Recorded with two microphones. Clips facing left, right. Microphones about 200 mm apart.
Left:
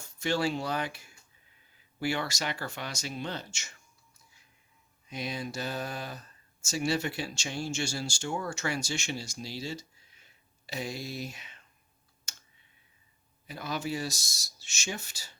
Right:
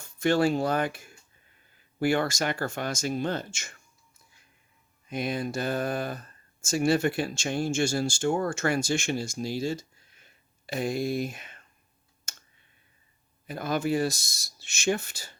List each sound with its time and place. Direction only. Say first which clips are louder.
0.0 s speech: right 6 dB; 55° right (ahead or behind)
5.0 s speech: right 6 dB; 55° right (ahead or behind)
12.3 s clicking: right 4 dB; 50° right (ahead or behind)
13.5 s speech: right 7 dB; 50° right (ahead or behind)